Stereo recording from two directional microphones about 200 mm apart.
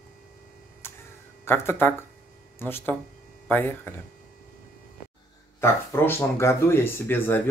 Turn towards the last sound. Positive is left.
turn(degrees=10)  # may be behind; listen again after turning